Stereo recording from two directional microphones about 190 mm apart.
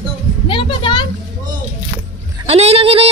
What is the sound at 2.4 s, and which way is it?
Speech, 30° right (ahead or behind).